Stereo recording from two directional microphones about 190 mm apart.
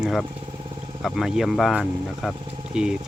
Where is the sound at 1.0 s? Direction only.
Centre (ahead or behind).